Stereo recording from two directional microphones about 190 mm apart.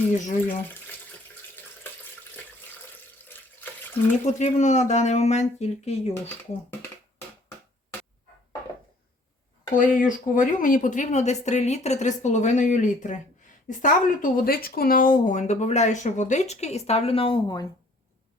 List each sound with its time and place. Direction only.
0.4 s speech: 10° left (ahead or behind)
4.4 s speech: 40° left (ahead or behind)
6.1 s speech: 10° left (ahead or behind)
9.7 s speech: 45° left (ahead or behind); by 17.7 s 25° left (ahead or behind)